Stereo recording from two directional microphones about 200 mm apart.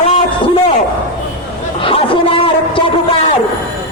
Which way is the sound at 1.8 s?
25° left (ahead or behind).